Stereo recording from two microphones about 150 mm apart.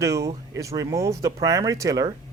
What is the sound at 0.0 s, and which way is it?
A man's voice, 20° right (ahead or behind).